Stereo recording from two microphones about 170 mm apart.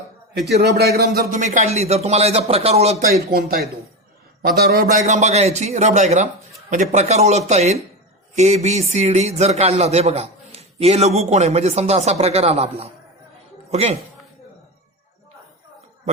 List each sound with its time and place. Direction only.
0.3 s a man's voice: 75° right (ahead or behind); by 3.1 s 40° right (ahead or behind)
3.3 s a man's voice: 65° right (ahead or behind); by 14.0 s 35° right (ahead or behind)